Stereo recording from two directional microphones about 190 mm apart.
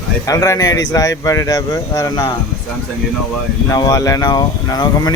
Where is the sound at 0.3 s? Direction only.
20° left (ahead or behind).